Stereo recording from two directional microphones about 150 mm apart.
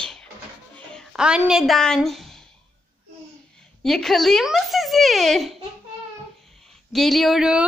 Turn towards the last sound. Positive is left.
turn(degrees=-5)  # may be behind; listen again after turning